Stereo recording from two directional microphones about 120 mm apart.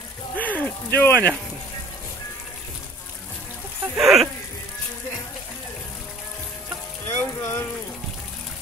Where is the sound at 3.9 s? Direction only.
Centre (ahead or behind).